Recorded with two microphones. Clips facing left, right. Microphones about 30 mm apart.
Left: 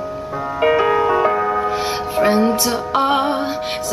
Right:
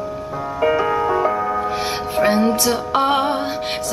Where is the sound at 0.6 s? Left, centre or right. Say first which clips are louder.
Left 3 dB; left.